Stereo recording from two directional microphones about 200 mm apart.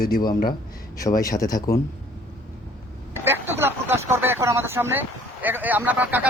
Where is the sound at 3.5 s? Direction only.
10° right (ahead or behind).